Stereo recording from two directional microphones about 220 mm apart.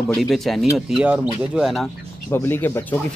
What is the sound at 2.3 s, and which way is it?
Speech, 10° left (ahead or behind).